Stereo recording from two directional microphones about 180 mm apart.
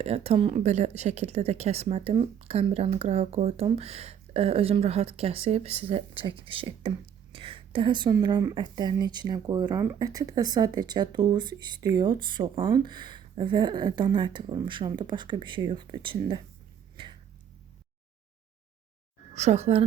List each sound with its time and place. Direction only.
0.0 s speech: 35° right (ahead or behind)
17.0 s a sound: 30° right (ahead or behind)
19.3 s speech: 40° right (ahead or behind)